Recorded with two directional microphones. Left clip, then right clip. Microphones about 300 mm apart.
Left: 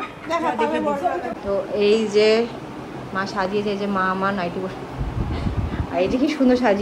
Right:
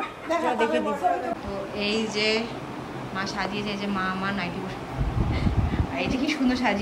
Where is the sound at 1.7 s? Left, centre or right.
Centre.